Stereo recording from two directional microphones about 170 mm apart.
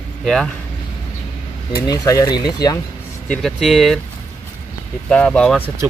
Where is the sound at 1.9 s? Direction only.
20° left (ahead or behind).